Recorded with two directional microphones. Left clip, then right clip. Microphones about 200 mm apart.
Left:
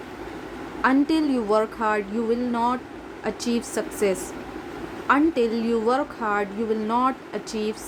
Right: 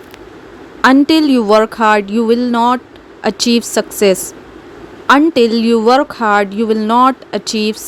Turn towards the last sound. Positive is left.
turn(degrees=-45)  # may be behind; listen again after turning